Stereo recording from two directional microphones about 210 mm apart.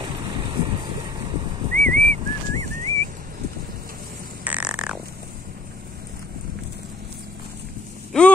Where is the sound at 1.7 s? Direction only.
35° right (ahead or behind).